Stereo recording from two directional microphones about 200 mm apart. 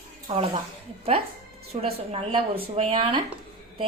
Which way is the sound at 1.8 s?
30° right (ahead or behind).